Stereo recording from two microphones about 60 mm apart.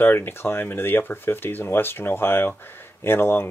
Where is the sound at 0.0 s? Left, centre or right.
Left.